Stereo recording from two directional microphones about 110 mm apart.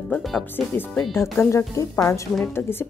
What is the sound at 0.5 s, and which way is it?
Speech, 20° left (ahead or behind).